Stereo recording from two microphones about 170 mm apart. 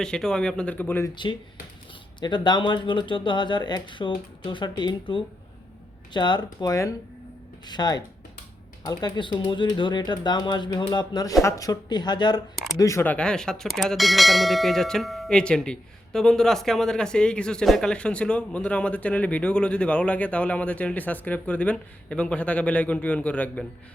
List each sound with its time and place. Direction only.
0.0 s speech: 5° left (ahead or behind)
1.1 s speech: 30° left (ahead or behind)
12.7 s bell: 15° left (ahead or behind)